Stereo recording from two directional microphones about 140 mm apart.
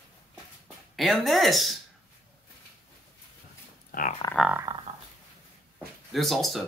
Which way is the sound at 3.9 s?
75° left (ahead or behind).